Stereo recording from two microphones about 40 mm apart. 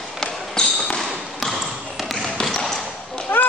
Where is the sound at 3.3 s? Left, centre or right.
Left.